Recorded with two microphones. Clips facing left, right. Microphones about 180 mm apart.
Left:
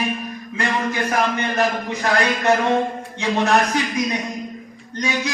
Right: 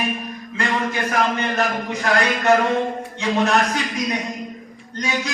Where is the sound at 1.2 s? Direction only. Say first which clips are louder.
Right 2 dB; 20° left (ahead or behind).